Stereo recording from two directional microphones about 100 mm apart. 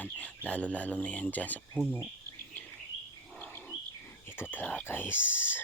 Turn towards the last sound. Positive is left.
turn(degrees=20)  # may be behind; listen again after turning